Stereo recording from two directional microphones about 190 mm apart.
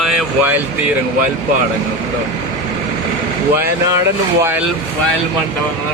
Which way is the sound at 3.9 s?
15° right (ahead or behind).